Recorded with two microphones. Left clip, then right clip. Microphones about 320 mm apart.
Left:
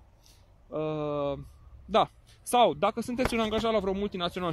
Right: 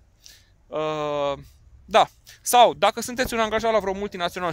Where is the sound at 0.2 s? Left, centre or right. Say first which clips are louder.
Right 13 dB; right.